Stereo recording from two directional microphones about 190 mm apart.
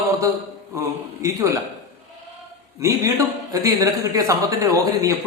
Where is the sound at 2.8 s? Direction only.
15° right (ahead or behind).